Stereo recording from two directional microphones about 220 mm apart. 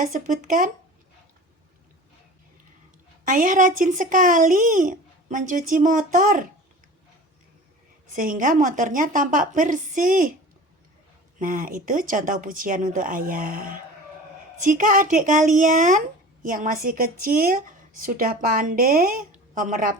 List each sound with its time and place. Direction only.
0.0 s a woman's voice: 40° right (ahead or behind)
3.2 s a woman's voice: 35° right (ahead or behind)
8.1 s a woman's voice: 40° right (ahead or behind)
11.3 s a woman's voice: 40° right (ahead or behind)